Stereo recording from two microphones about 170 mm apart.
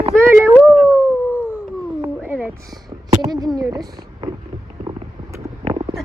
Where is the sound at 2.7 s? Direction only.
20° right (ahead or behind).